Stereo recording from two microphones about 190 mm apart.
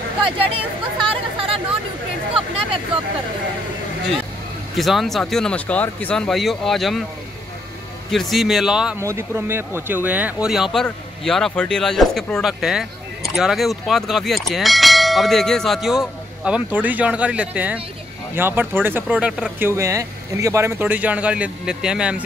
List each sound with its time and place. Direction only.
1.0 s speech: 30° right (ahead or behind)
4.7 s speech: centre (ahead or behind)
8.1 s speech: centre (ahead or behind)
9.0 s speech: 15° right (ahead or behind)